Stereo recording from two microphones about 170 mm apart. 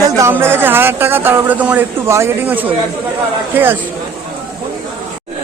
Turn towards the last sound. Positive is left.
turn(degrees=-10)  # may be behind; listen again after turning